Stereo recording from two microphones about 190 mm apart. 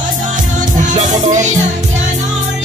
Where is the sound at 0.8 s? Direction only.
40° right (ahead or behind).